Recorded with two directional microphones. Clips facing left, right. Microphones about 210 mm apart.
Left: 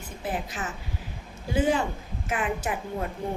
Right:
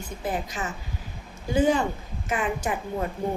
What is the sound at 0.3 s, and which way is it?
A woman's voice, 5° left (ahead or behind).